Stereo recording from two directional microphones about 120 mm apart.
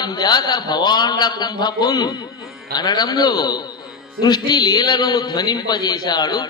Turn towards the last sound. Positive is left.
turn(degrees=35)  # may be behind; listen again after turning